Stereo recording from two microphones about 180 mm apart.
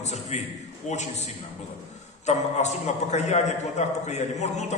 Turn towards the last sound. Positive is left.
turn(degrees=40)  # may be behind; listen again after turning